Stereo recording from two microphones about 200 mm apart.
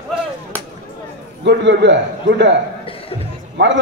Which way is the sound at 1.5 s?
60° right (ahead or behind).